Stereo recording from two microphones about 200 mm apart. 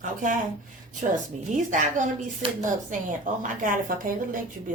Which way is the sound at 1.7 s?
40° right (ahead or behind).